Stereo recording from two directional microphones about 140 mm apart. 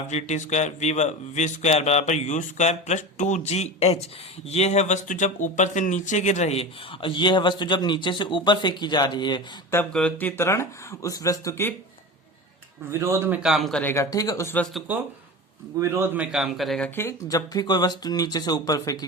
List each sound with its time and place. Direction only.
0.1 s a man's voice: 55° left (ahead or behind); by 9.4 s 30° left (ahead or behind)
9.9 s speech: 10° left (ahead or behind)
12.9 s speech: 20° right (ahead or behind)
13.5 s a man's voice: centre (ahead or behind)
13.8 s speech: 20° left (ahead or behind)
14.5 s a man's voice: 5° left (ahead or behind)
15.8 s a man's voice: 15° right (ahead or behind); by 16.9 s centre (ahead or behind)
16.9 s speech: 20° left (ahead or behind)